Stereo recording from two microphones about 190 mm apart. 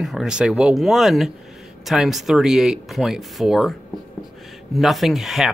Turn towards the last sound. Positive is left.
turn(degrees=0)  # may be behind; listen again after turning